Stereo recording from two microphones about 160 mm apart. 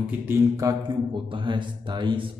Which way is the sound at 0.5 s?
25° right (ahead or behind).